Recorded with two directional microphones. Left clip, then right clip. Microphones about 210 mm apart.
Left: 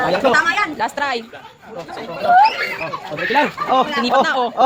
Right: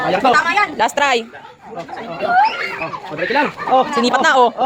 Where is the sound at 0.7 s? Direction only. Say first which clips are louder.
Right 5 dB; 35° right (ahead or behind).